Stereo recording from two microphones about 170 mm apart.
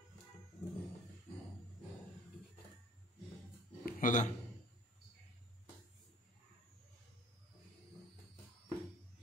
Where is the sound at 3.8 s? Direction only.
50° left (ahead or behind).